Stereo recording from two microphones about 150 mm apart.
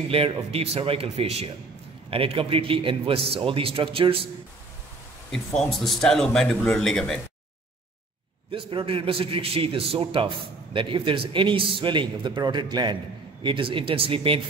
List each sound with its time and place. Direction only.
0.1 s a man's voice: 40° right (ahead or behind)
5.6 s speech: 5° left (ahead or behind)
8.5 s a man's voice: 35° right (ahead or behind)